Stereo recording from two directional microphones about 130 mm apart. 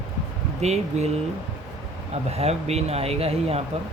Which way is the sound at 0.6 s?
55° right (ahead or behind).